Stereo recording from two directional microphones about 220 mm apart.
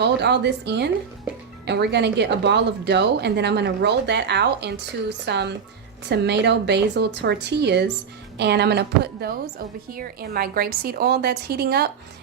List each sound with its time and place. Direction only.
0.0 s a woman's voice: 50° right (ahead or behind)